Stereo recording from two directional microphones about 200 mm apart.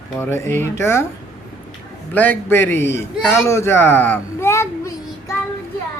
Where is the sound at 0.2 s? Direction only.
10° left (ahead or behind).